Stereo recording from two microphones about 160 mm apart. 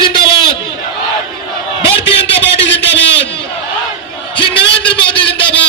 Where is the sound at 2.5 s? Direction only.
90° left.